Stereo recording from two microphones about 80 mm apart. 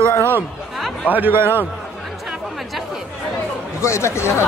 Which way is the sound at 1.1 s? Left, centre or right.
Right.